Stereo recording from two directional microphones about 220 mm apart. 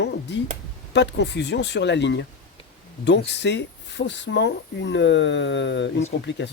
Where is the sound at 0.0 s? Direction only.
50° left (ahead or behind).